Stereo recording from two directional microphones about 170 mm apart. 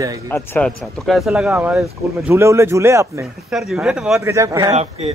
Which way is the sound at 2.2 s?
10° right (ahead or behind).